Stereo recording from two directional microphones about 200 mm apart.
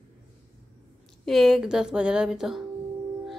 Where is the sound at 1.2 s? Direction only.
Centre (ahead or behind).